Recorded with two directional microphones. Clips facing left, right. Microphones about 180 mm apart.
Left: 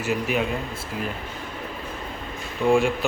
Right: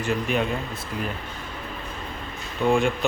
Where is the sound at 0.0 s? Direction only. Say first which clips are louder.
Even; 5° left (ahead or behind).